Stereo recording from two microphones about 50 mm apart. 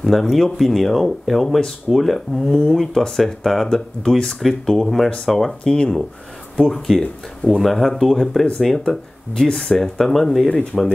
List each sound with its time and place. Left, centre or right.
0.0 s speech: centre
5.6 s speech: centre
6.5 s speech: centre
10.5 s speech: left